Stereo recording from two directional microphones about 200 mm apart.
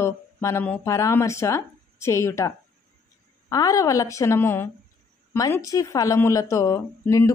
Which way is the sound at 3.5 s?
15° left (ahead or behind).